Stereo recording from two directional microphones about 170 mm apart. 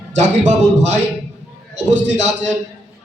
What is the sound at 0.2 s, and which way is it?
Speech, 45° right (ahead or behind).